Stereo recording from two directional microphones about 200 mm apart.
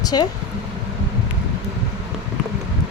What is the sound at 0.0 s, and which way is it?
Speech, 20° left (ahead or behind).